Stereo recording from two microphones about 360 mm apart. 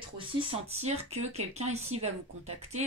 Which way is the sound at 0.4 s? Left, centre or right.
Centre.